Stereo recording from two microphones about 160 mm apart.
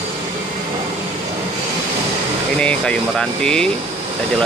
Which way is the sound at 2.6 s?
5° left (ahead or behind).